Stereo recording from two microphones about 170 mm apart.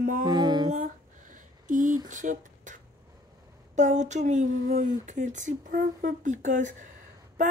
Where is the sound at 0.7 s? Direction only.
50° right (ahead or behind).